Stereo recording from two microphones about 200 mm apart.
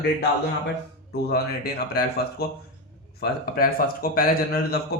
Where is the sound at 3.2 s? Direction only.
45° left (ahead or behind).